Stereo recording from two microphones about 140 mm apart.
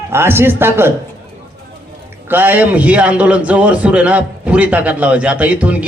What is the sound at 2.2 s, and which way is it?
A man's voice, 15° right (ahead or behind).